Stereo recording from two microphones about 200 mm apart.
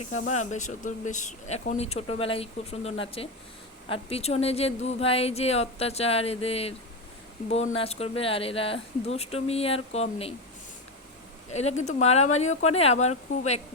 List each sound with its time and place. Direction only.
0.5 s speech: 40° left (ahead or behind)
11.5 s speech: 35° left (ahead or behind)